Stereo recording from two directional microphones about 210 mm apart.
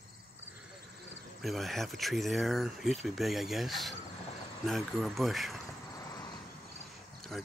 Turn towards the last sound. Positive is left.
turn(degrees=0)  # may be behind; listen again after turning